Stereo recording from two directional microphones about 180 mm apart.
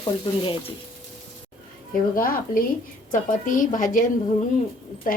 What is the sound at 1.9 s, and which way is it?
Speech, 50° left (ahead or behind).